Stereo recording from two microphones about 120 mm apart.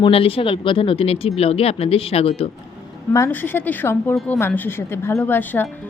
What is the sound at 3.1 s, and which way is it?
A woman's voice, 20° left (ahead or behind).